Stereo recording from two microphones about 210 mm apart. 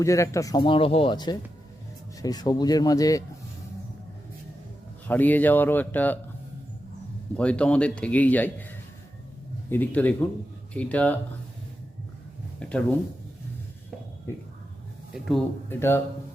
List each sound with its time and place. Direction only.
0.0 s speech: 15° left (ahead or behind)
5.0 s speech: 10° left (ahead or behind)
7.3 s a man's voice: 5° left (ahead or behind)
12.5 s speech: 5° left (ahead or behind)
15.1 s a man's voice: centre (ahead or behind)